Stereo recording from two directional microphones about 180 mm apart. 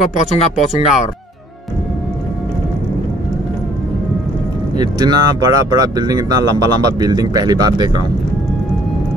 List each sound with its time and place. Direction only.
0.1 s speech: 35° left (ahead or behind)
4.7 s speech: 25° right (ahead or behind)